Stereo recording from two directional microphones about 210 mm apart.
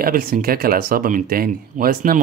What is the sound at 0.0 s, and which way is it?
Speech, 45° right (ahead or behind).